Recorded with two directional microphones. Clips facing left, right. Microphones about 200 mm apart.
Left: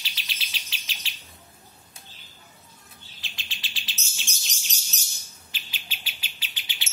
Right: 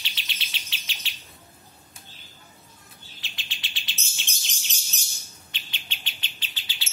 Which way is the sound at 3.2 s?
Centre (ahead or behind).